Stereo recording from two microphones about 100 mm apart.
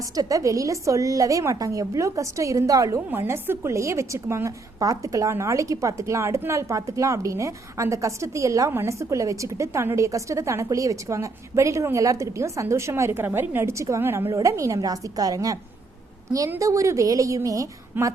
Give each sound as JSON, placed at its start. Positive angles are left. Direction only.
{"t": 0.0, "sound": "a woman's voice", "side_deg": -35}
{"t": 16.6, "sound": "a woman's voice", "side_deg": -35}
{"t": 18.0, "sound": "speech", "side_deg": -20}